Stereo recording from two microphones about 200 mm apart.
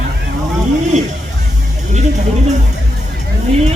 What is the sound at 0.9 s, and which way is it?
Music, 35° right (ahead or behind).